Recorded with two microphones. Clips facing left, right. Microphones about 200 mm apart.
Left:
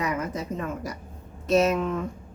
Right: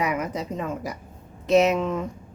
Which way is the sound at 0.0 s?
15° right (ahead or behind).